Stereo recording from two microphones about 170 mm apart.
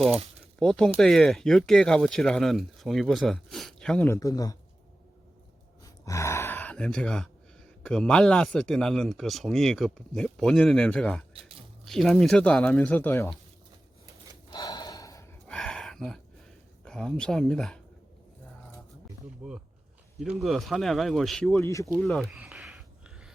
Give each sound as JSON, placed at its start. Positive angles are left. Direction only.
{"t": 0.6, "sound": "speech", "side_deg": 5}
{"t": 5.8, "sound": "speech", "side_deg": 20}
{"t": 11.3, "sound": "a sound", "side_deg": -35}
{"t": 11.9, "sound": "speech", "side_deg": 0}
{"t": 14.5, "sound": "gasp", "side_deg": 25}
{"t": 15.4, "sound": "a sound", "side_deg": 5}
{"t": 16.8, "sound": "speech", "side_deg": 5}
{"t": 20.1, "sound": "speech", "side_deg": 0}
{"t": 21.5, "sound": "speech", "side_deg": 15}
{"t": 21.9, "sound": "speech", "side_deg": 0}
{"t": 22.4, "sound": "a sound", "side_deg": -5}